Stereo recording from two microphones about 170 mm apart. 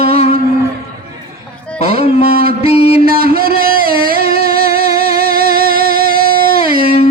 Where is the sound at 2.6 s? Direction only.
35° left (ahead or behind).